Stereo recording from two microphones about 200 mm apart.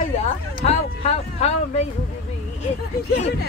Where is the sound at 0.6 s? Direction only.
30° left (ahead or behind).